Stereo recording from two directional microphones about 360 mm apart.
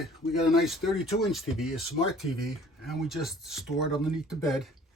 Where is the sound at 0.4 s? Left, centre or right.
Centre.